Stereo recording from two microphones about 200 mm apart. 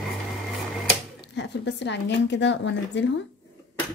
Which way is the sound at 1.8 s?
60° left (ahead or behind).